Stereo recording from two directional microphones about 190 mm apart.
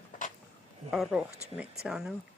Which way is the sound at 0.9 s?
Centre (ahead or behind).